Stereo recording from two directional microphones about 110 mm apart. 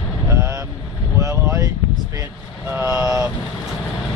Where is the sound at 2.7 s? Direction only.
20° right (ahead or behind).